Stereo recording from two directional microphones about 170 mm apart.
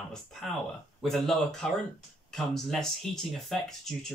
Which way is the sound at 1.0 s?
Centre (ahead or behind).